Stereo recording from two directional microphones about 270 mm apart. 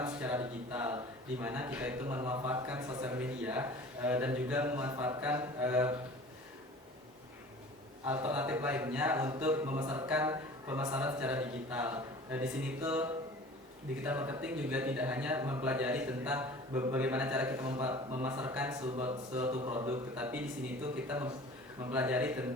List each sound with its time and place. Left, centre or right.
0.0 s a man's voice: centre
8.0 s a man's voice: centre
21.8 s speech: centre